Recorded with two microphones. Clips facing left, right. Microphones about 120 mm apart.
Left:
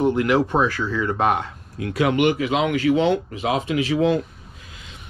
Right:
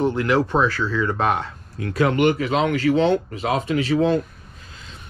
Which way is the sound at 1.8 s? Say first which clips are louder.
Even; 35° right (ahead or behind).